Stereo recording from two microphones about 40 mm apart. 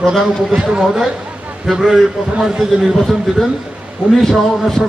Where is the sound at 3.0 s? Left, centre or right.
Centre.